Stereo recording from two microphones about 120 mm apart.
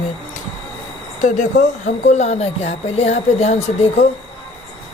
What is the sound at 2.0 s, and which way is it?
Speech, 75° left (ahead or behind).